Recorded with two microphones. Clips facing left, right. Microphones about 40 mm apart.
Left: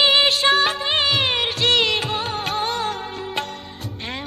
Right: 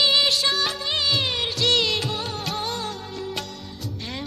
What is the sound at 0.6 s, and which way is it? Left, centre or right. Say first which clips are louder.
Music of bollywood: left 5 dB; left.